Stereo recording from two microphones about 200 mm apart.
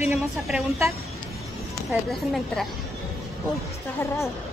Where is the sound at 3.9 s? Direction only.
15° left (ahead or behind).